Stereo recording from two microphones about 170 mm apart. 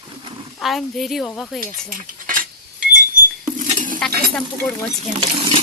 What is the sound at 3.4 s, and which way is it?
Rodents, 50° right (ahead or behind).